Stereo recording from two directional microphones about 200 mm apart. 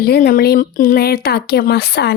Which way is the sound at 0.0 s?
50° left (ahead or behind).